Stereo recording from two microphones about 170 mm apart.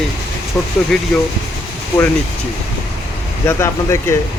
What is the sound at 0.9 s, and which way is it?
Speech, centre (ahead or behind).